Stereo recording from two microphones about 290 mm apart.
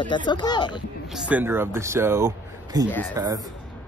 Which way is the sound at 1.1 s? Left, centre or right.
Centre.